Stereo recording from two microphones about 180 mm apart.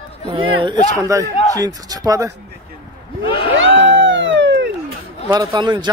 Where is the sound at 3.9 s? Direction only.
90° right.